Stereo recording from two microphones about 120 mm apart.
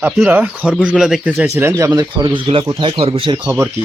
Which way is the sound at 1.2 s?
15° right (ahead or behind).